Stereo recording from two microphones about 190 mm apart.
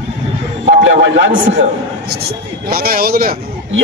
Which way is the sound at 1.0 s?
70° right (ahead or behind).